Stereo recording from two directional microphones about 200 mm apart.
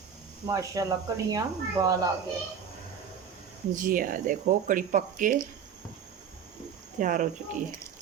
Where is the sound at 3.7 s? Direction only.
45° right (ahead or behind).